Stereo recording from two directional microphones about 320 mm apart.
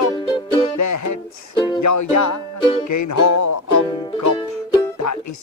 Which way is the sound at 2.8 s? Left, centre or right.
Left.